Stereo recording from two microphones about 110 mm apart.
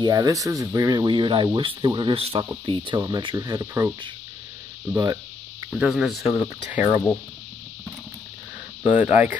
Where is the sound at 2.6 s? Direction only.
45° right (ahead or behind).